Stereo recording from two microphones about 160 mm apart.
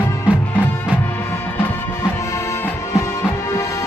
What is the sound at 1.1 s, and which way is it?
Music, 15° left (ahead or behind).